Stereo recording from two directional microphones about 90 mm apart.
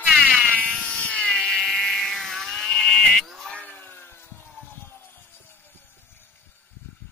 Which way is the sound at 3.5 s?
20° left (ahead or behind).